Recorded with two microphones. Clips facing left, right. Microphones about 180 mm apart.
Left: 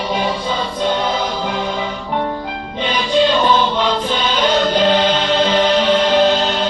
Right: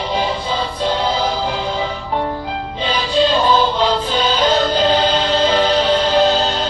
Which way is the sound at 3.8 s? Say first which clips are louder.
Right 1 dB; 35° right (ahead or behind).